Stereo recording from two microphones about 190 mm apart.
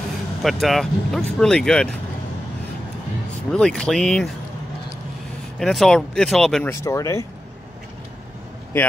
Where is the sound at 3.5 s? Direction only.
5° left (ahead or behind).